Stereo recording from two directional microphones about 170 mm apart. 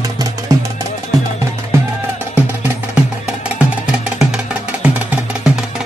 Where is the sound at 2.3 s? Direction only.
10° right (ahead or behind).